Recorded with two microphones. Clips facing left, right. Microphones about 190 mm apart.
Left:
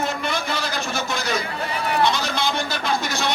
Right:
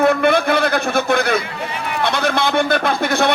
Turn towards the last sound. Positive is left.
turn(degrees=-55)  # may be behind; listen again after turning